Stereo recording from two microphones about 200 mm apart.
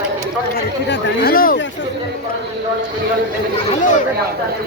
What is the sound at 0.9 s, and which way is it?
Speech, 50° left (ahead or behind).